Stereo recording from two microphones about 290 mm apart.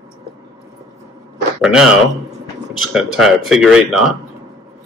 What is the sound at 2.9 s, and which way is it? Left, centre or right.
Speech, centre.